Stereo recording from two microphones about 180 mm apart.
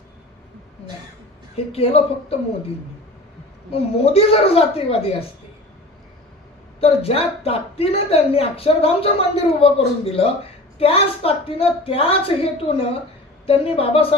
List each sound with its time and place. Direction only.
1.5 s a woman's voice: 35° left (ahead or behind)
3.7 s a woman's voice: 35° left (ahead or behind)
6.7 s a woman's voice: 30° left (ahead or behind)